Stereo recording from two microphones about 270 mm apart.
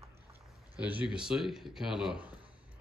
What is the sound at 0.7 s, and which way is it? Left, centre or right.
Speech, centre.